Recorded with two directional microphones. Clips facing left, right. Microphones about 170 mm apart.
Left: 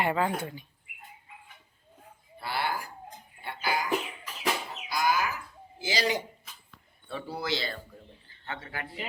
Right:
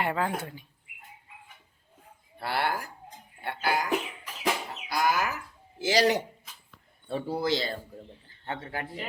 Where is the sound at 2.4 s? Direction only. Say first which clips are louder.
Right 3 dB; 65° right (ahead or behind).